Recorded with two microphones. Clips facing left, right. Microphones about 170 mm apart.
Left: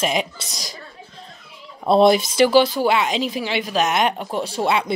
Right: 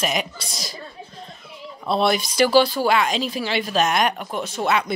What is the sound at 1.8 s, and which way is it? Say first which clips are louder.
Speech: left 7 dB; 45° left (ahead or behind).